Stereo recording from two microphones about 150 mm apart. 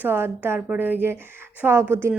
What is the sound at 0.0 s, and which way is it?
A woman's voice, 15° right (ahead or behind).